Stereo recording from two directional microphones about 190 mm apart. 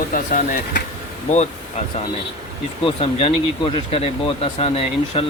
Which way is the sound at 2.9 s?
30° left (ahead or behind).